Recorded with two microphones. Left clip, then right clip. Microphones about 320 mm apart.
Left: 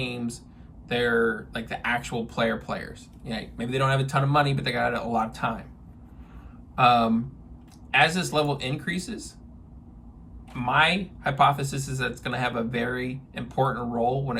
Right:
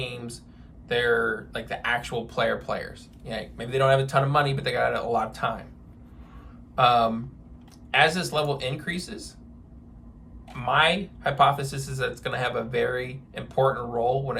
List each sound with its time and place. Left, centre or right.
0.0 s a sound: centre
0.9 s speech: centre
6.7 s speech: centre
8.1 s speech: centre
10.6 s speech: centre